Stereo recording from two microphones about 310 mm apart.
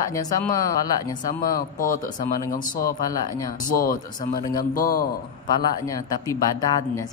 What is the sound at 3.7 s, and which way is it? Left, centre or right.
Speech, left.